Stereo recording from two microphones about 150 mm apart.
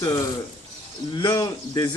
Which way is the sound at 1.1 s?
30° left (ahead or behind).